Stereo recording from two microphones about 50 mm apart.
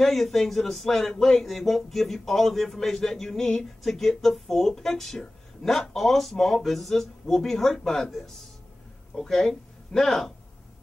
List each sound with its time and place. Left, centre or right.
0.0 s speech: centre